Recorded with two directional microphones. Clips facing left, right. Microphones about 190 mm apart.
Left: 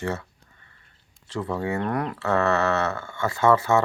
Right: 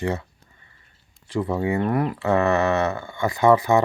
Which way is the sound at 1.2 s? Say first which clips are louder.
Right 4 dB; 15° right (ahead or behind).